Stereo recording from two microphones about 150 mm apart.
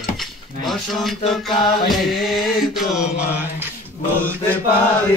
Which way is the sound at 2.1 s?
Centre (ahead or behind).